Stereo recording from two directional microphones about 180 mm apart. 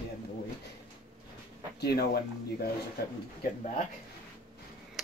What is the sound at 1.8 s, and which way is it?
Speech, 60° left (ahead or behind).